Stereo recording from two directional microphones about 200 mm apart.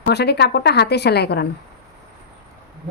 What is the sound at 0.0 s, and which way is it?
A woman's voice, 55° left (ahead or behind).